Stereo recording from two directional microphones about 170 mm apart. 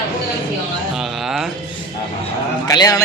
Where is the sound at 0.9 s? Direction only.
Centre (ahead or behind).